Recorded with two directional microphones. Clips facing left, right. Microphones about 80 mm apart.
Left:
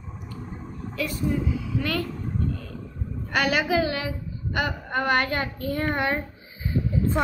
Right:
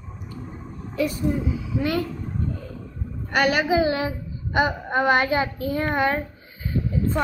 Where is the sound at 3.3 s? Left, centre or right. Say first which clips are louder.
Right 3 dB; centre.